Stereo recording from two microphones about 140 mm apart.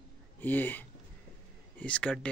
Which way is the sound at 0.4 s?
15° left (ahead or behind).